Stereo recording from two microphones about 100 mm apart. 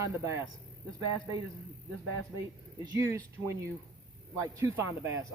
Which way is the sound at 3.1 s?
30° right (ahead or behind).